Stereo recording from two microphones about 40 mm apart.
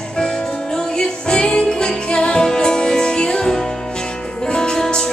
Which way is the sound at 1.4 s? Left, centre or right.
Left.